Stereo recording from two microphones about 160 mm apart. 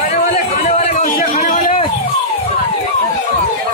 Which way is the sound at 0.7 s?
45° left (ahead or behind).